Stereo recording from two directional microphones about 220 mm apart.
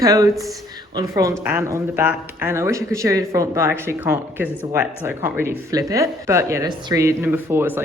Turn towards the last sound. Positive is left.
turn(degrees=-10)  # may be behind; listen again after turning